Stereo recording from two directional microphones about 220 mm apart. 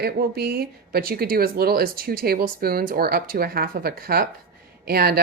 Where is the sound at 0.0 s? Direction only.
45° right (ahead or behind).